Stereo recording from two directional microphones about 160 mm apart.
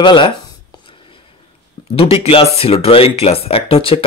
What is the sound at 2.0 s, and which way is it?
Speech, 35° left (ahead or behind).